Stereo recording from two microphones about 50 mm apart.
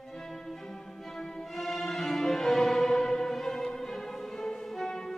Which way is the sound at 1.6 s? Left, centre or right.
Centre.